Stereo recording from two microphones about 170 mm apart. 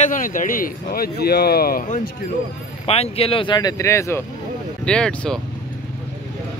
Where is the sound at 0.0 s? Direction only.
50° left (ahead or behind).